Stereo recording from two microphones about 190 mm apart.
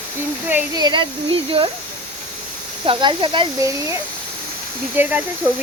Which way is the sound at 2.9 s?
25° right (ahead or behind).